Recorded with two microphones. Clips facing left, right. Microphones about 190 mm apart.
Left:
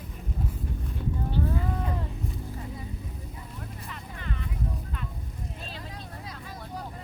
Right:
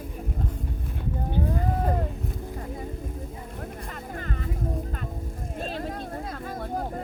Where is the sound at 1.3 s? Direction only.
50° right (ahead or behind).